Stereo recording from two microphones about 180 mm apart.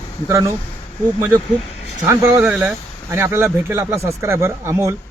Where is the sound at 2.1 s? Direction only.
15° right (ahead or behind).